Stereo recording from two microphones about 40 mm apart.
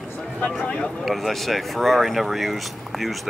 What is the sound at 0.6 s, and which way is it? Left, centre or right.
Speech, left.